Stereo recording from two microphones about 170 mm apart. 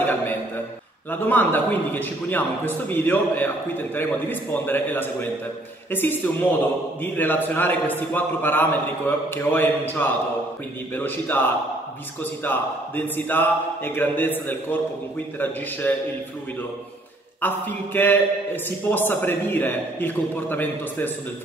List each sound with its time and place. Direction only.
1.1 s a man's voice: 10° left (ahead or behind)
17.4 s a man's voice: 10° left (ahead or behind)